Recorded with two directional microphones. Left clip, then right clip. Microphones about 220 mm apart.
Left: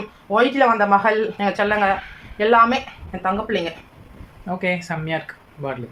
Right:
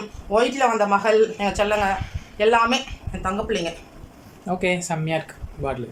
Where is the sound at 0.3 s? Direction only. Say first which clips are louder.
Left 3 dB; centre (ahead or behind).